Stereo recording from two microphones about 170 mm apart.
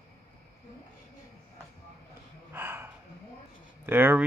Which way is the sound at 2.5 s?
15° right (ahead or behind).